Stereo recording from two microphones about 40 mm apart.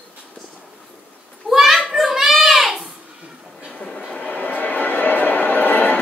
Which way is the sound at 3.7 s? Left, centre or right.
Centre.